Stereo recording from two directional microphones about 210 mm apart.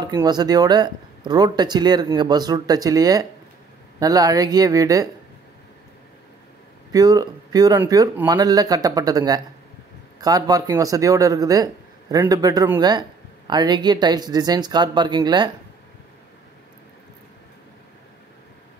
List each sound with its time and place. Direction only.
0.0 s speech: 20° right (ahead or behind)
6.9 s speech: 15° right (ahead or behind)